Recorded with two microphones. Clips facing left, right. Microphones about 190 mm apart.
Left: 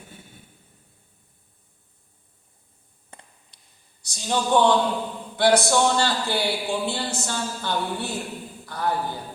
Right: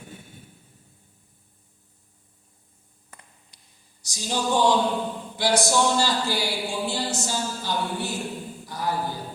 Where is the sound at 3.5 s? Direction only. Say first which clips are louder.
Right 1 dB; 60° left (ahead or behind).